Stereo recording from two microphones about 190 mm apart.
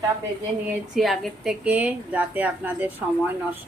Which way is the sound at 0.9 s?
Centre (ahead or behind).